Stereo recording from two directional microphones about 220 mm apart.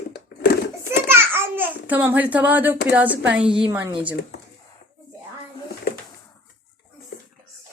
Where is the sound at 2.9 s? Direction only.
5° right (ahead or behind).